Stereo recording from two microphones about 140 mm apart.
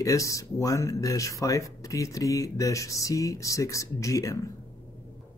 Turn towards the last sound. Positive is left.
turn(degrees=25)  # may be behind; listen again after turning